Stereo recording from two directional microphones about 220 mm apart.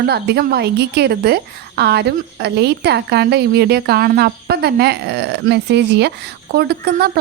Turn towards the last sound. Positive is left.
turn(degrees=-45)  # may be behind; listen again after turning